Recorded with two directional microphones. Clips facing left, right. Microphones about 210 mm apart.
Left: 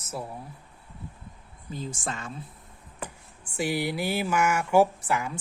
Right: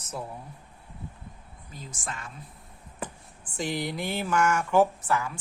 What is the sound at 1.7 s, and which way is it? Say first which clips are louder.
Speech: left 6 dB; 30° left (ahead or behind).